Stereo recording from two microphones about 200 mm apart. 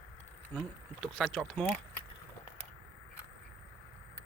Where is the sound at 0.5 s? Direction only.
Centre (ahead or behind).